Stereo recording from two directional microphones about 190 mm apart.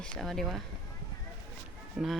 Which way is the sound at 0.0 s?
Centre (ahead or behind).